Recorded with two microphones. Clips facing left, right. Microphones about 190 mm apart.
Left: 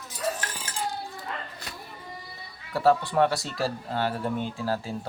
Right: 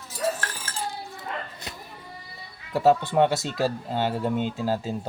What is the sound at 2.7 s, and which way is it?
Speech, 20° right (ahead or behind).